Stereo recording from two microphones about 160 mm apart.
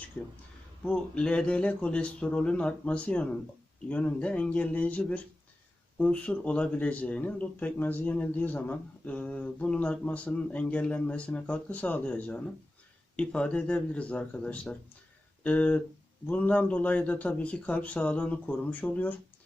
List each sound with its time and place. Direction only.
0.9 s a man's voice: 5° left (ahead or behind)